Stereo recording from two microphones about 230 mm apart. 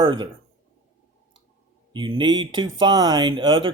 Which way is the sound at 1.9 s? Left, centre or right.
Right.